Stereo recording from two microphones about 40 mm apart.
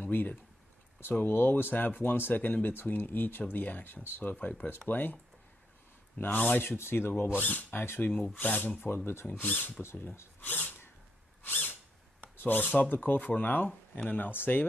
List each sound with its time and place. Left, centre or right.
0.0 s speech: left
1.2 s speech: left
4.2 s speech: left
6.1 s speech: left
6.6 s speech: left
7.8 s speech: left
8.1 s speech: left
8.8 s speech: left
9.3 s speech: left
9.8 s speech: left
11.4 s a sound: left
12.4 s speech: left